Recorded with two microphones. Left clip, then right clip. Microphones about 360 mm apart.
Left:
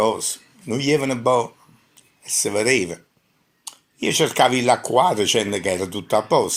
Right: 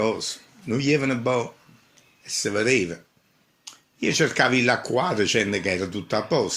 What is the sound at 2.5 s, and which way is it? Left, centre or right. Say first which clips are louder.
Speech: left 2 dB; centre.